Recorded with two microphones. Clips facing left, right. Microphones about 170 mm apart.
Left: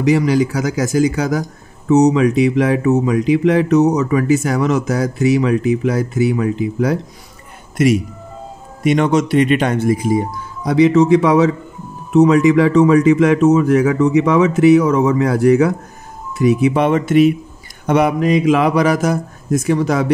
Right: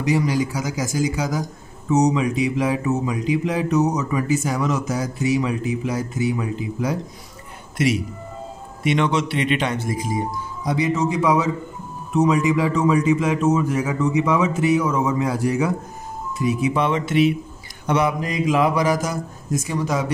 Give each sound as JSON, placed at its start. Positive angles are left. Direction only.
{"t": 0.0, "sound": "speech", "side_deg": 75}
{"t": 7.7, "sound": "speech", "side_deg": 50}
{"t": 17.8, "sound": "speech", "side_deg": 60}